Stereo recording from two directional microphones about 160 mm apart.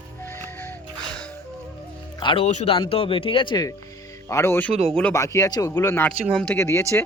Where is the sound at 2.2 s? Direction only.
35° left (ahead or behind).